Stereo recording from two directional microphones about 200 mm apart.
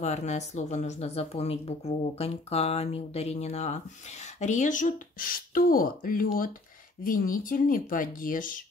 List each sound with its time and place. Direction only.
0.0 s speech: 35° left (ahead or behind)